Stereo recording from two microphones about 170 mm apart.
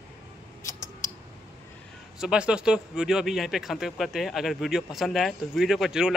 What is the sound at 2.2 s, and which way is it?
Speech, 5° right (ahead or behind).